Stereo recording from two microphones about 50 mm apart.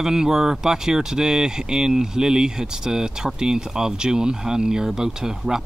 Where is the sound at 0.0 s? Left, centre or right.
Centre.